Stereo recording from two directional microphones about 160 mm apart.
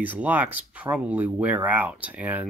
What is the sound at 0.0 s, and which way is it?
Speech, 10° right (ahead or behind).